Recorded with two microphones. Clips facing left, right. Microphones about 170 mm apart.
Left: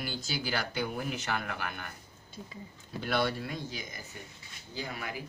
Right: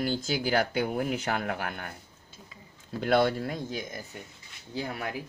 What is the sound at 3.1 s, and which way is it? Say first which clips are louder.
Speech: right 7 dB; 50° right (ahead or behind).